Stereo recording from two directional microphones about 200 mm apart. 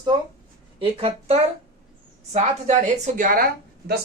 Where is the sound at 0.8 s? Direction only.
30° right (ahead or behind).